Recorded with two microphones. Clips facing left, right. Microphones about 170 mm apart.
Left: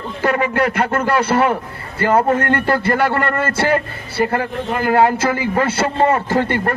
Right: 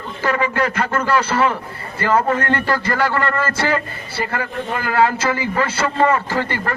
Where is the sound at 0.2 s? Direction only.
55° left (ahead or behind).